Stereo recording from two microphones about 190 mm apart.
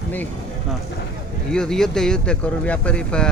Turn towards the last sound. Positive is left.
turn(degrees=5)  # may be behind; listen again after turning